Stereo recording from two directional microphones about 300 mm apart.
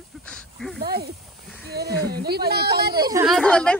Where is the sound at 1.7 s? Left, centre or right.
Right.